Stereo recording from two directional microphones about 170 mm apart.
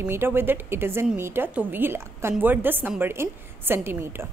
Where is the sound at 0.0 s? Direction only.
15° right (ahead or behind).